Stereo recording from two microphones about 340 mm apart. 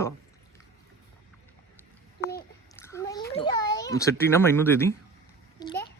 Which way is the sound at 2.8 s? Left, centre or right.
Centre.